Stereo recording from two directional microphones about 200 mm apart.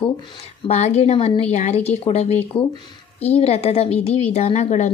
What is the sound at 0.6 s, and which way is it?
A woman's voice, 35° left (ahead or behind).